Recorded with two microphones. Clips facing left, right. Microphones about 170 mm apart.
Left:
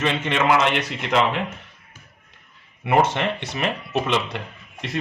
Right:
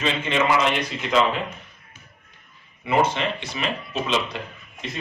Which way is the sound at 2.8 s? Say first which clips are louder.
Left 2 dB; 75° left (ahead or behind).